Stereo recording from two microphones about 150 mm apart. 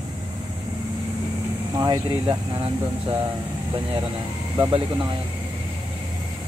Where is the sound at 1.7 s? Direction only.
25° right (ahead or behind).